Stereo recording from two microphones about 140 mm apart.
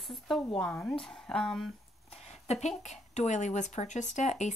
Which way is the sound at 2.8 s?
55° left (ahead or behind).